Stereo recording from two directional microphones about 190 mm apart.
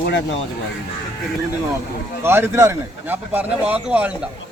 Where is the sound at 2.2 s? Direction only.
10° right (ahead or behind).